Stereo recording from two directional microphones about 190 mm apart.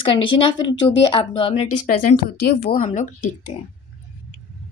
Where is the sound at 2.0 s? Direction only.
55° left (ahead or behind).